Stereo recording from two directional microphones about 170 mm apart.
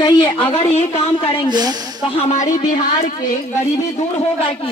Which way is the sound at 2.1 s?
40° left (ahead or behind).